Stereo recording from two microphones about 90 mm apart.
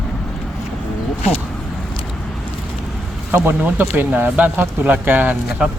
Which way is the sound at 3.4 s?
20° right (ahead or behind).